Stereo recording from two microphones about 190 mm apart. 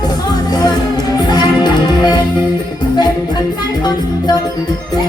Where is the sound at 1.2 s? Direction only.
20° left (ahead or behind).